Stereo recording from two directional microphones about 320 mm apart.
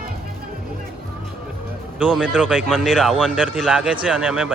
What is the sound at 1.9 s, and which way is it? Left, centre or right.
Speech, centre.